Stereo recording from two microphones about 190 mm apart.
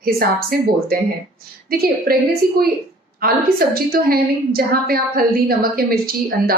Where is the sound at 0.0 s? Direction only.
50° right (ahead or behind).